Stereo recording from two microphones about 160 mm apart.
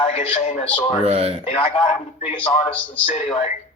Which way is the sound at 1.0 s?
40° right (ahead or behind).